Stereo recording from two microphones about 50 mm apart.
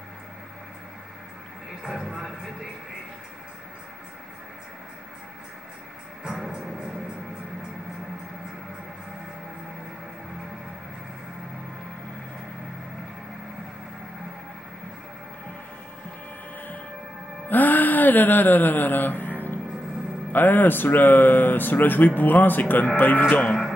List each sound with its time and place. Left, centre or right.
1.8 s speech: centre
17.5 s a sound: left
20.3 s speech: left
23.4 s speech: centre